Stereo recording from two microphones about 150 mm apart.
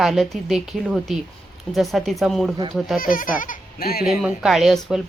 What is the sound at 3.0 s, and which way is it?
Speech, 70° left (ahead or behind).